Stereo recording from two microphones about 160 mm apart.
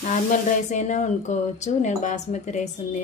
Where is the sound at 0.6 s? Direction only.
50° left (ahead or behind).